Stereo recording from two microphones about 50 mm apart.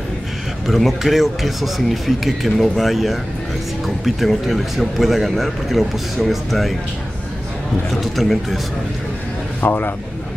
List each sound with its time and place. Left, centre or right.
0.7 s a man's voice: centre
7.9 s a man's voice: centre
9.6 s a man's voice: left